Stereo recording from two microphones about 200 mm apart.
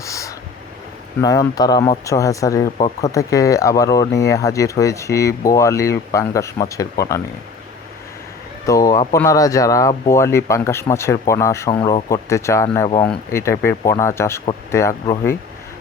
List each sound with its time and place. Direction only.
0.0 s a sound: 15° left (ahead or behind)
1.2 s speech: 20° left (ahead or behind)
8.6 s speech: 15° left (ahead or behind)
11.7 s speech: 25° left (ahead or behind)